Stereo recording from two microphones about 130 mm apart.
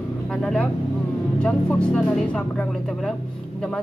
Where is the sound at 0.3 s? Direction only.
5° left (ahead or behind).